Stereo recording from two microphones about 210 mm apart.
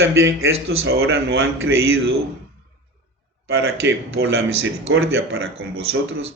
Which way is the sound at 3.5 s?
50° right (ahead or behind).